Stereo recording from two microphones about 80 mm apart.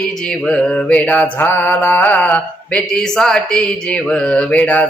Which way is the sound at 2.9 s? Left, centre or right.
Centre.